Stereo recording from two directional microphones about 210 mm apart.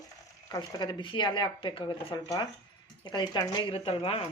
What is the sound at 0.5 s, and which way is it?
Speech, 20° left (ahead or behind).